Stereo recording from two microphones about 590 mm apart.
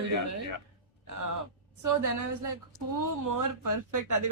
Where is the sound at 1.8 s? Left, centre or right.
Right.